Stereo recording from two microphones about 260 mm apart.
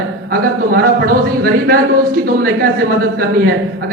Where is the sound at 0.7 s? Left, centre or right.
Right.